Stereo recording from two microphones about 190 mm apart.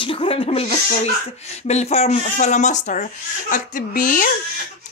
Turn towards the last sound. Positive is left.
turn(degrees=45)  # may be behind; listen again after turning